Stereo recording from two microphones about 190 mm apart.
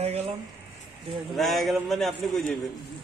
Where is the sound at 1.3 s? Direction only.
Centre (ahead or behind).